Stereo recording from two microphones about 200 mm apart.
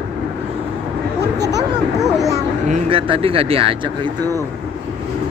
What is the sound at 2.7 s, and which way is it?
Speech, 25° right (ahead or behind).